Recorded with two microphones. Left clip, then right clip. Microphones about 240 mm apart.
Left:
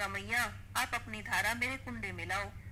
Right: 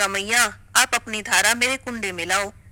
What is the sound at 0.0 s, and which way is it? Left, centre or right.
A man's voice, right.